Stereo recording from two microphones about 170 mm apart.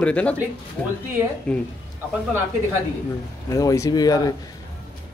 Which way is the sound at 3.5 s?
20° left (ahead or behind).